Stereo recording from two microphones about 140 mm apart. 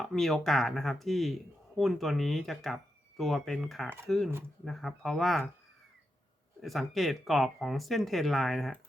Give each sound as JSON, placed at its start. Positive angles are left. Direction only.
{"t": 0.0, "sound": "speech", "side_deg": 0}
{"t": 6.6, "sound": "speech", "side_deg": 0}